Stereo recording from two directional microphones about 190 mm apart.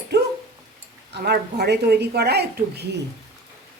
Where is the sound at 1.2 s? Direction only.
60° right (ahead or behind).